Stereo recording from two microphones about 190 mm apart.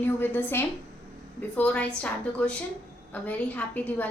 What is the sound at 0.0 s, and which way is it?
A woman's voice, 10° left (ahead or behind).